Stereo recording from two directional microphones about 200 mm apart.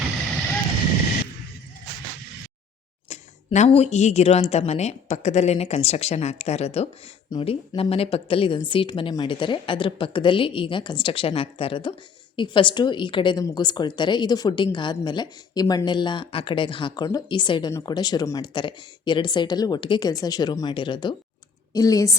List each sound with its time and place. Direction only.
3.1 s a woman's voice: 35° left (ahead or behind); by 22.1 s 15° left (ahead or behind)